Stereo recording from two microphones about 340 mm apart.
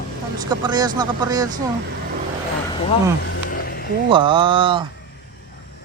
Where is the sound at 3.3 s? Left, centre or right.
Left.